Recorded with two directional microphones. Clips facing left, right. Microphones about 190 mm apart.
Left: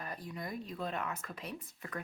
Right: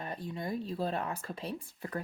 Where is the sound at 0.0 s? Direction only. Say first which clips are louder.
Right 4 dB; 25° right (ahead or behind).